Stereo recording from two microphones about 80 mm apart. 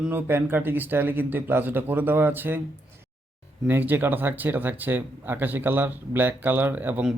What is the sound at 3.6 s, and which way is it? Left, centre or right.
A man's voice, right.